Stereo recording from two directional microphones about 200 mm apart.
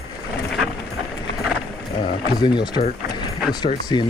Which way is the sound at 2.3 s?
20° left (ahead or behind).